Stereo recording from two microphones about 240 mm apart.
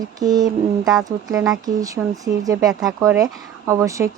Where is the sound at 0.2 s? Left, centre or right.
Centre.